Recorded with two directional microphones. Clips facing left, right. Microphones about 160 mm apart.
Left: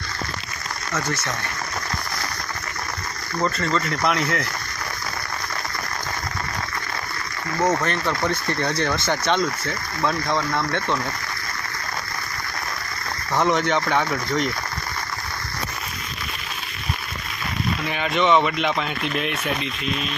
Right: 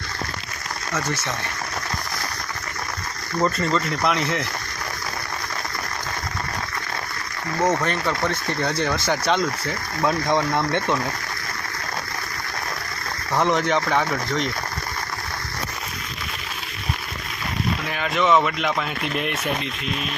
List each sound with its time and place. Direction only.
3.4 s speech: 5° right (ahead or behind)
7.6 s speech: 5° left (ahead or behind); by 11.0 s 15° right (ahead or behind)
13.3 s speech: centre (ahead or behind)
17.9 s speech: centre (ahead or behind)